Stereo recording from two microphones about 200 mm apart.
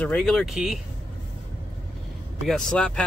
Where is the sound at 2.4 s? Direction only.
5° left (ahead or behind).